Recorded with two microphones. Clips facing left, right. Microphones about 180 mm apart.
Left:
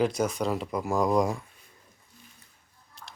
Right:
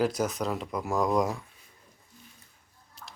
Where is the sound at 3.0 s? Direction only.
5° right (ahead or behind).